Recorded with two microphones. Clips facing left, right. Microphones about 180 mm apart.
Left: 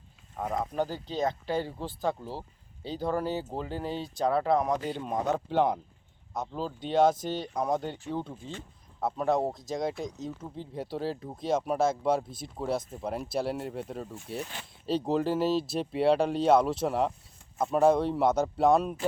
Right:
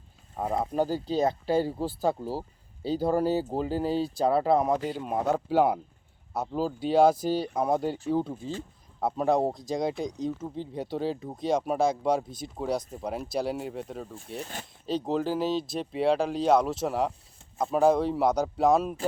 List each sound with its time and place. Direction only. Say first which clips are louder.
0.3 s speech: right 3 dB; 30° right (ahead or behind)
4.7 s speech: right 2 dB; 5° right (ahead or behind)
9.0 s speech: right 2 dB; centre (ahead or behind)